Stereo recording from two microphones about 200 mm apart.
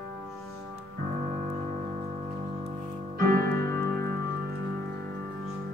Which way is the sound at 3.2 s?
50° right (ahead or behind).